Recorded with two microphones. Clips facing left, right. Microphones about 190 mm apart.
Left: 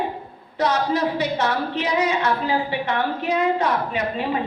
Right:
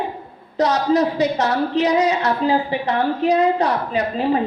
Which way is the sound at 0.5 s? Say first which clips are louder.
Right 4 dB; 40° right (ahead or behind).